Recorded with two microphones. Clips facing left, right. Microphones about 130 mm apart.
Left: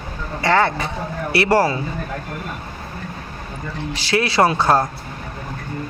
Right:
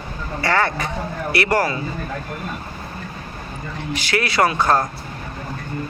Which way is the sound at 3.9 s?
25° left (ahead or behind).